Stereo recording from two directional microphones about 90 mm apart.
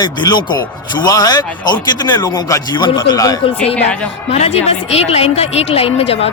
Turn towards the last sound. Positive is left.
turn(degrees=90)